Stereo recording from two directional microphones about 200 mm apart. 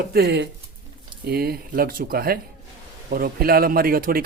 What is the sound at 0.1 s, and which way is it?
Speech, 55° right (ahead or behind).